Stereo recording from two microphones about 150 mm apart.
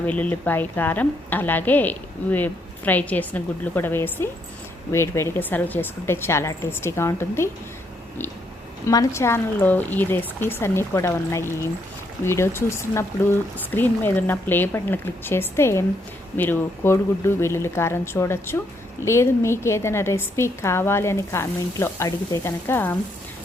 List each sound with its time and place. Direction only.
0.0 s a woman's voice: 10° left (ahead or behind)
8.9 s a woman's voice: 20° left (ahead or behind)